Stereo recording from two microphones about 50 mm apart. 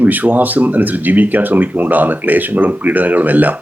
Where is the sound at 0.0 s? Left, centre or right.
Right.